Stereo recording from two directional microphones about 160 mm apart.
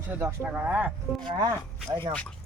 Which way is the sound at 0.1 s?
15° right (ahead or behind).